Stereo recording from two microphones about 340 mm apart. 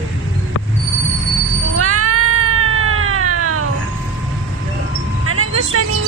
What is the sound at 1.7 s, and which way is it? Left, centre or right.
Cat, right.